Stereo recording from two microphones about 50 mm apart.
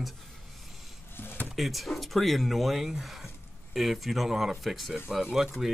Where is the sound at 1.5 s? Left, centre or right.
Centre.